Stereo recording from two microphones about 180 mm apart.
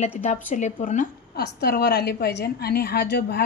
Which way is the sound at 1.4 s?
65° left (ahead or behind).